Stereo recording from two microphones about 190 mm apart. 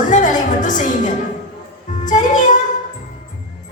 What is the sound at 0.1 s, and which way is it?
Music, 40° left (ahead or behind).